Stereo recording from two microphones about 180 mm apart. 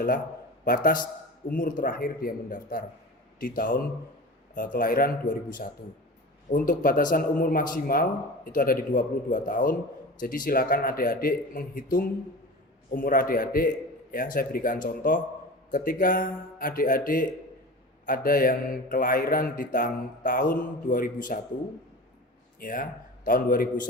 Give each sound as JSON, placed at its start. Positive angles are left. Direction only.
{"t": 0.6, "sound": "a man's voice", "side_deg": 50}
{"t": 22.6, "sound": "speech", "side_deg": 50}